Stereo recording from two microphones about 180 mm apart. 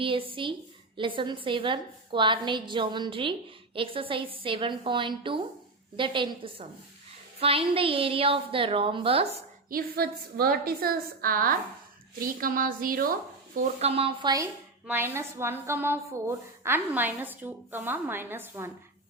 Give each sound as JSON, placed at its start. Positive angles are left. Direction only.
{"t": 0.0, "sound": "a woman's voice", "side_deg": -30}
{"t": 9.6, "sound": "a woman's voice", "side_deg": -55}
{"t": 13.6, "sound": "a woman's voice", "side_deg": -40}
{"t": 14.8, "sound": "a woman's voice", "side_deg": -10}